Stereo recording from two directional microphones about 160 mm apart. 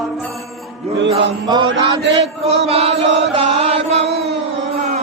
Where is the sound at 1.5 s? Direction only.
30° right (ahead or behind).